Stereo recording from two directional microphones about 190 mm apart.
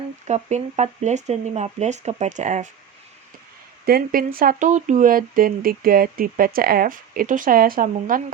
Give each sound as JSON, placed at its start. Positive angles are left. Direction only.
{"t": 0.3, "sound": "speech", "side_deg": -35}
{"t": 3.8, "sound": "speech", "side_deg": -50}